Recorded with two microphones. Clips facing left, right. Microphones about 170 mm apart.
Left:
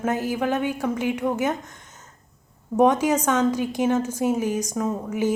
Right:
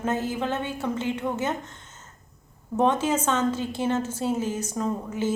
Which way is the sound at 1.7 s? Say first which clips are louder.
Left 1 dB; 15° left (ahead or behind).